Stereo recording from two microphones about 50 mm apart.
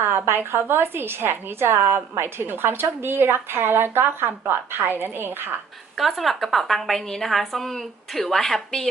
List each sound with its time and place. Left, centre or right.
0.3 s a woman's voice: right
6.0 s a woman's voice: centre